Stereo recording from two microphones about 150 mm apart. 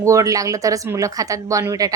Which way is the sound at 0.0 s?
20° right (ahead or behind).